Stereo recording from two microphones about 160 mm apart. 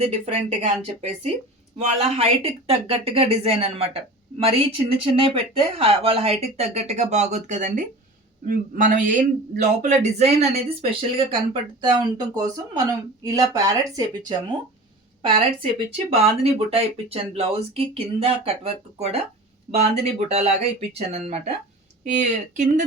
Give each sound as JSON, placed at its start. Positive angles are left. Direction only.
{"t": 0.0, "sound": "speech", "side_deg": -40}
{"t": 15.4, "sound": "speech", "side_deg": -35}